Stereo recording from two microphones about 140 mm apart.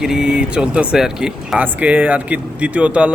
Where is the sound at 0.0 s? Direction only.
5° right (ahead or behind).